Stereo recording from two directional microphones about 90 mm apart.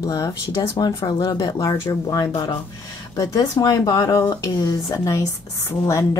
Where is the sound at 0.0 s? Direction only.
40° left (ahead or behind).